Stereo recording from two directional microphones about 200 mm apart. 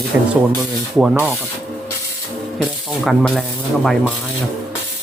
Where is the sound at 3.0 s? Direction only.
Centre (ahead or behind).